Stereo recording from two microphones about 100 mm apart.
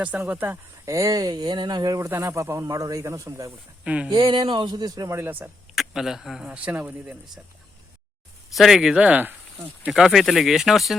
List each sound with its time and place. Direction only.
0.2 s speech: 20° right (ahead or behind)
0.9 s speech: 35° right (ahead or behind)
2.0 s speech: 25° right (ahead or behind)
3.8 s speech: 10° right (ahead or behind)
4.1 s speech: 50° right (ahead or behind)
5.1 s speech: 20° right (ahead or behind)
5.7 s speech: 5° right (ahead or behind)
6.4 s speech: 15° right (ahead or behind)
8.5 s speech: centre (ahead or behind)
9.9 s speech: 5° right (ahead or behind)